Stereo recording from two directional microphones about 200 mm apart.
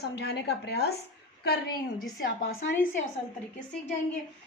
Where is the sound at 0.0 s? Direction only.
55° left (ahead or behind).